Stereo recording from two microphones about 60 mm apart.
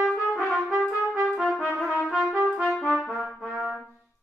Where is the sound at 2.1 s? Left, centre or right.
Centre.